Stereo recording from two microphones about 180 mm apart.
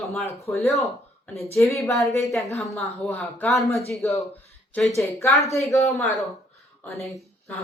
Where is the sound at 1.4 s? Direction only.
15° left (ahead or behind).